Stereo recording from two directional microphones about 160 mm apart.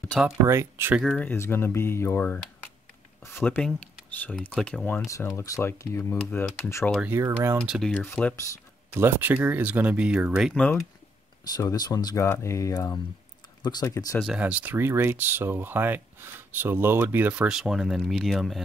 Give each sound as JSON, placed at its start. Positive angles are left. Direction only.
{"t": 0.5, "sound": "speech", "side_deg": -15}
{"t": 1.2, "sound": "speech", "side_deg": 15}
{"t": 6.9, "sound": "speech", "side_deg": -5}
{"t": 7.2, "sound": "speech", "side_deg": -15}
{"t": 7.6, "sound": "speech", "side_deg": -5}
{"t": 7.9, "sound": "speech", "side_deg": 10}
{"t": 8.9, "sound": "speech", "side_deg": -15}
{"t": 10.6, "sound": "speech", "side_deg": 10}
{"t": 11.5, "sound": "speech", "side_deg": 25}
{"t": 14.2, "sound": "speech", "side_deg": -5}